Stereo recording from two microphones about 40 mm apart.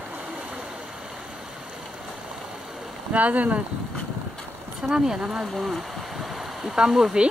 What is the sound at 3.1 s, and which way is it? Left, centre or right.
Speech, right.